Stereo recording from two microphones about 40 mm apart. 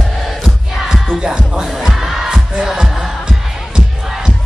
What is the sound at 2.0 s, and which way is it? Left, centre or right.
Music, centre.